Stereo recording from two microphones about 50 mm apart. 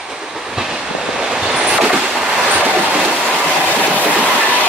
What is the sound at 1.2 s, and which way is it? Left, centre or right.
Train, centre.